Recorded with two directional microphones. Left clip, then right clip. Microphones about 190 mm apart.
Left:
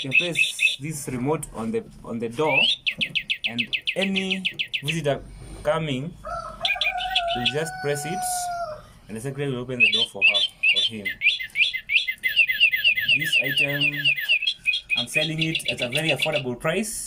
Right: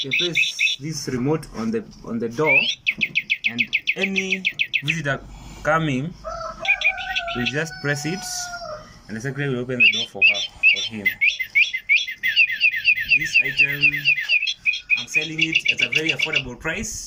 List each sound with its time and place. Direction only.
0.1 s speech: 15° left (ahead or behind)
0.9 s speech: centre (ahead or behind)
2.5 s speech: 15° left (ahead or behind)
6.6 s bird: 20° left (ahead or behind)
7.5 s speech: 5° left (ahead or behind)
9.7 s speech: 20° left (ahead or behind)
10.8 s bird: 15° left (ahead or behind)
15.4 s speech: 20° left (ahead or behind)
16.5 s speech: 40° left (ahead or behind)